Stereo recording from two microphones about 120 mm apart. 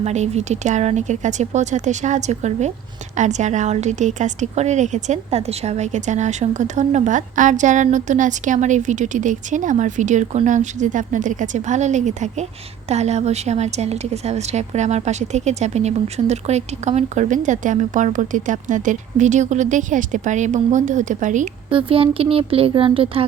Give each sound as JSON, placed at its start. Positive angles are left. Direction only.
{"t": 0.0, "sound": "speech", "side_deg": -70}
{"t": 3.2, "sound": "a woman's voice", "side_deg": -80}
{"t": 12.9, "sound": "a woman's voice", "side_deg": -65}
{"t": 21.7, "sound": "speech", "side_deg": -50}